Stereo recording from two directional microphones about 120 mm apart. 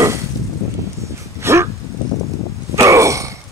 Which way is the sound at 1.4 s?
20° right (ahead or behind).